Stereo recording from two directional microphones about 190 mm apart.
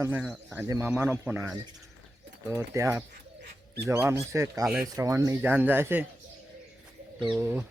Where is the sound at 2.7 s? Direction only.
15° right (ahead or behind).